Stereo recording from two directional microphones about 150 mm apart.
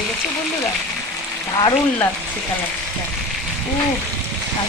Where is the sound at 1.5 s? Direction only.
30° left (ahead or behind).